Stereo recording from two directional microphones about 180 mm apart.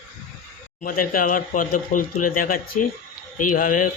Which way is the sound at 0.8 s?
50° left (ahead or behind).